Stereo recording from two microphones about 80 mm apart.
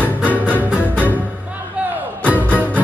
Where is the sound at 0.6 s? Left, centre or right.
Centre.